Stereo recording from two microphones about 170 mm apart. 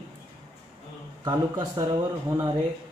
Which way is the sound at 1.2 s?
25° right (ahead or behind).